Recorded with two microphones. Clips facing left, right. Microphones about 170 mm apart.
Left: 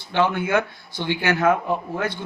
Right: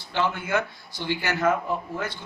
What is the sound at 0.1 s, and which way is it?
A man's voice, 60° left (ahead or behind).